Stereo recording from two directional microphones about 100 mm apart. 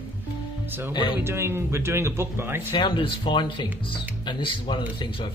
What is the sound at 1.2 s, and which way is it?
Speech, 25° right (ahead or behind).